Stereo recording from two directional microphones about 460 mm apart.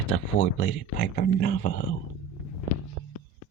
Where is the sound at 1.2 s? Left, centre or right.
Centre.